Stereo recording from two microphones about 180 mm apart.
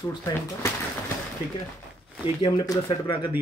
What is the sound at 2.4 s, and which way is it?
Speech, 25° left (ahead or behind).